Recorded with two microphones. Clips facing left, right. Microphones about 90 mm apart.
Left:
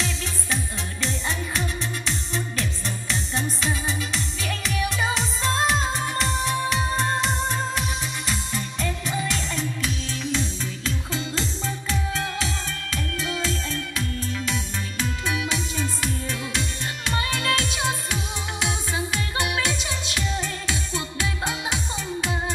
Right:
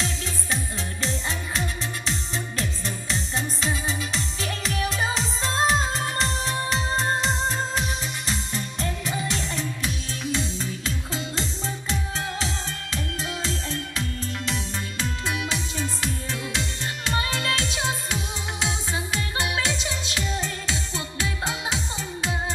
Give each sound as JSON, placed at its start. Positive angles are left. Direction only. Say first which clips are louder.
{"t": 2.3, "sound": "music", "louder": "left 1 dB", "side_deg": -25}
{"t": 10.3, "sound": "music", "louder": "right 1 dB", "side_deg": -15}
{"t": 15.2, "sound": "music", "louder": "left 2 dB", "side_deg": -25}